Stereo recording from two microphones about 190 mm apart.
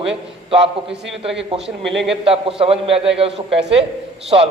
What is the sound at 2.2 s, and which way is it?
A man's voice, 30° right (ahead or behind).